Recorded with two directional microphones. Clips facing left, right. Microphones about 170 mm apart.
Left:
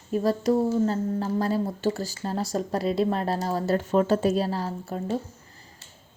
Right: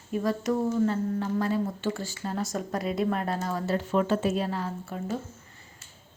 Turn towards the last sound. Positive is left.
turn(degrees=35)  # may be behind; listen again after turning